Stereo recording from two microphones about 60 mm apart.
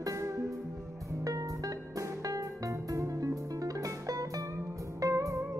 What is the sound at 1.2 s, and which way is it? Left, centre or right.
Music, right.